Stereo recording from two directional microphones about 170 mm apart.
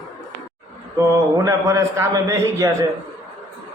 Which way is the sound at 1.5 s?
20° right (ahead or behind).